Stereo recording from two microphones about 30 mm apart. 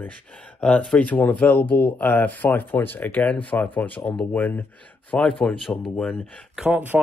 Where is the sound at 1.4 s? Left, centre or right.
Left.